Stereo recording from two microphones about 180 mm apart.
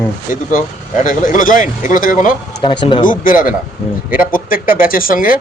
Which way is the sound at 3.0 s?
50° left (ahead or behind).